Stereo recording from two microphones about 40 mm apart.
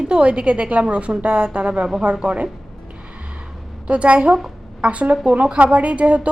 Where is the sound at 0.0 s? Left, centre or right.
Right.